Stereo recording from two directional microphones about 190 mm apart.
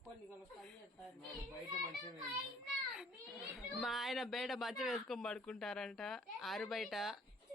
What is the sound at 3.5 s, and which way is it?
Speech, centre (ahead or behind).